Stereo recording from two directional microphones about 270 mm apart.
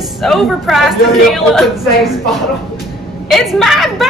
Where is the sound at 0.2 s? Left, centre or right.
Centre.